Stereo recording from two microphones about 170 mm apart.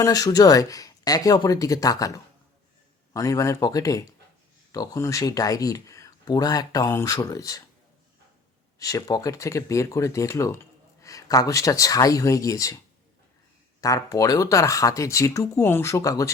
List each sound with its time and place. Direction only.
0.0 s speech: 20° left (ahead or behind)
8.8 s speech: 20° left (ahead or behind)
13.8 s speech: 20° left (ahead or behind)